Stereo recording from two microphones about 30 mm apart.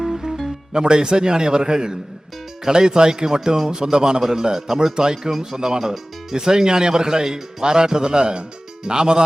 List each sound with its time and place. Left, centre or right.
0.0 s music: centre
0.7 s speech: right